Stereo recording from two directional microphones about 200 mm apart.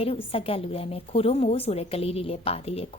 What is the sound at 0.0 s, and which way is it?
A woman's voice, 30° left (ahead or behind).